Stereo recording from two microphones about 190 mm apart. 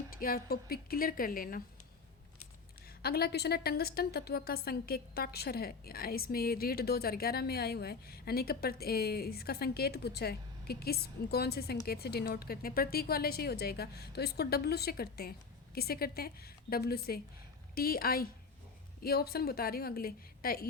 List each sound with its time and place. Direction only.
0.1 s a woman's voice: 50° left (ahead or behind)
3.0 s a woman's voice: 55° left (ahead or behind)